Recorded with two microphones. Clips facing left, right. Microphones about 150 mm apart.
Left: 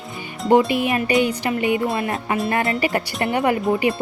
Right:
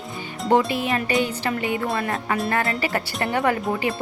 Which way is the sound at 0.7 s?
15° left (ahead or behind).